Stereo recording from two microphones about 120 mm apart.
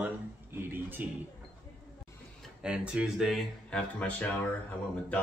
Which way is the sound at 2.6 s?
5° right (ahead or behind).